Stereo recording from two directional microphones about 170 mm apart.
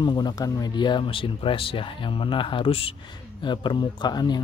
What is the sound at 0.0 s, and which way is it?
Speech, 25° left (ahead or behind).